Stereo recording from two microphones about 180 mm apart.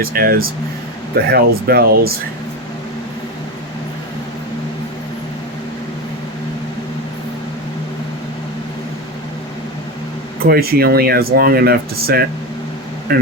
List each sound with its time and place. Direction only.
0.0 s speech: 55° right (ahead or behind)
10.4 s speech: 60° right (ahead or behind)